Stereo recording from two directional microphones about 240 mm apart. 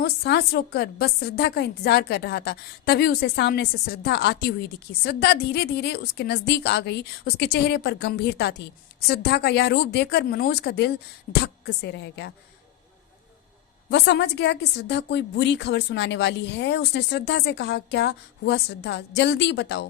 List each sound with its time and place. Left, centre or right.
0.0 s a woman's voice: left
13.9 s a woman's voice: left